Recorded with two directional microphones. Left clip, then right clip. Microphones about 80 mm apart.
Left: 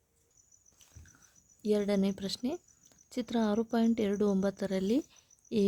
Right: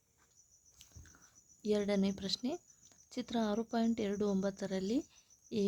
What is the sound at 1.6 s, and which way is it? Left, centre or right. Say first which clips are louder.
Speech: left 4 dB; left.